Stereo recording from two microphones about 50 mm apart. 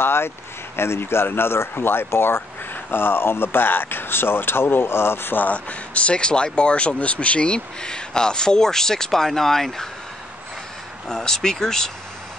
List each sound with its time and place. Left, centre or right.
0.0 s speech: left
5.5 s speech: left; by 9.8 s centre
11.1 s speech: centre